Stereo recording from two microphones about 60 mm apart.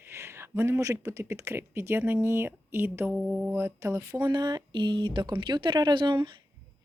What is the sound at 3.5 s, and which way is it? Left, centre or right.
Mantra, right.